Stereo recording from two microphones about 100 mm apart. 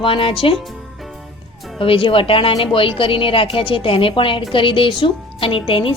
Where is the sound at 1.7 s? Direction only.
60° left (ahead or behind).